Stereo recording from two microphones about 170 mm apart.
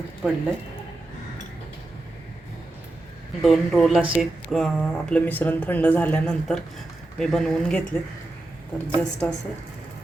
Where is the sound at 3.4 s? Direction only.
Centre (ahead or behind).